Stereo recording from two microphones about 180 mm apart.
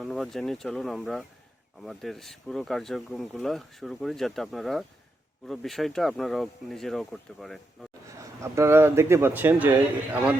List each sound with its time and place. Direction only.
0.0 s speech: centre (ahead or behind)
8.2 s speech: 15° right (ahead or behind)